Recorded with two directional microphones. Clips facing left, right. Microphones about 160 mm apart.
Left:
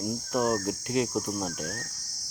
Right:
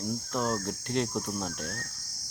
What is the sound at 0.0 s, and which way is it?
Cricket, 10° left (ahead or behind).